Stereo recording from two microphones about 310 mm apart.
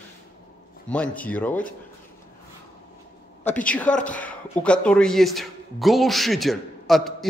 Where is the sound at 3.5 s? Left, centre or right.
Centre.